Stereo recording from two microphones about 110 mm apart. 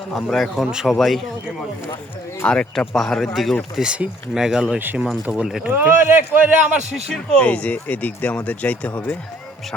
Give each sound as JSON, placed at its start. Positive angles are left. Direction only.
{"t": 0.1, "sound": "speech", "side_deg": 0}
{"t": 2.4, "sound": "speech", "side_deg": 10}
{"t": 4.8, "sound": "a man's voice", "side_deg": -15}
{"t": 5.2, "sound": "speech", "side_deg": -5}
{"t": 5.7, "sound": "a man's voice", "side_deg": -20}
{"t": 6.9, "sound": "speech", "side_deg": 5}